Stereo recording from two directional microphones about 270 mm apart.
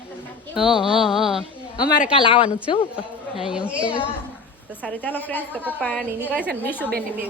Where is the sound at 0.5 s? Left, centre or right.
Centre.